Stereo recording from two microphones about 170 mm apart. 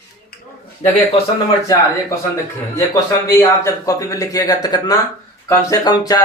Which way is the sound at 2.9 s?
15° left (ahead or behind).